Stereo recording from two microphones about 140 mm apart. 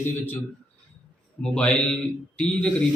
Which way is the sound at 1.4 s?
10° left (ahead or behind).